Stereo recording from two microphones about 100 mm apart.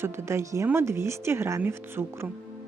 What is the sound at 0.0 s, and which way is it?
A woman's voice, 25° right (ahead or behind).